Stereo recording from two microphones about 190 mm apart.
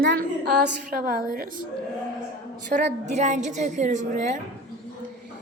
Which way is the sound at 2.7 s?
40° right (ahead or behind).